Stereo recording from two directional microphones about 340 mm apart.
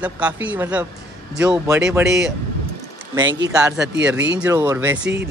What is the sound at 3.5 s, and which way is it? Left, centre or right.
Speech, centre.